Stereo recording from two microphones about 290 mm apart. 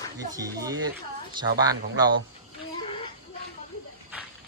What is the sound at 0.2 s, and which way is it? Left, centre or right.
Speech, centre.